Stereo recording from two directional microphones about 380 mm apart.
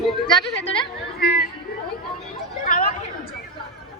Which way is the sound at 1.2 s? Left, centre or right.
Left.